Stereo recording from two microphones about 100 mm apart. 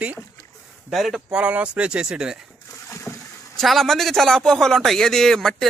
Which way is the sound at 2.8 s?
30° left (ahead or behind).